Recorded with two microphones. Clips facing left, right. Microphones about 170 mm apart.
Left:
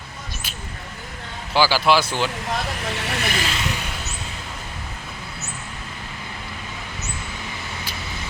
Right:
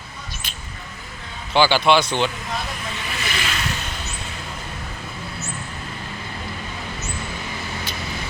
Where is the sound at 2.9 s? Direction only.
75° left (ahead or behind).